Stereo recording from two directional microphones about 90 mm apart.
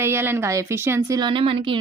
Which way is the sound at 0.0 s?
25° right (ahead or behind).